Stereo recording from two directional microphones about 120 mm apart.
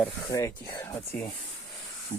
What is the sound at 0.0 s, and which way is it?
Speech, 20° left (ahead or behind).